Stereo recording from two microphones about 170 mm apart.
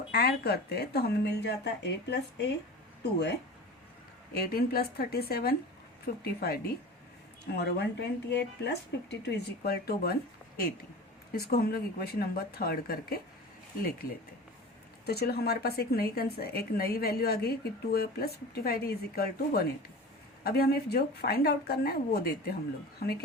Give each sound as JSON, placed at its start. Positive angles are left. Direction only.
{"t": 0.1, "sound": "speech", "side_deg": 70}
{"t": 4.4, "sound": "speech", "side_deg": 60}
{"t": 7.5, "sound": "speech", "side_deg": 80}
{"t": 11.3, "sound": "speech", "side_deg": 65}
{"t": 15.0, "sound": "speech", "side_deg": 70}